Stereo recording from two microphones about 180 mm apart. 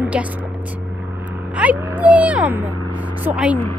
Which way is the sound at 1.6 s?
10° right (ahead or behind).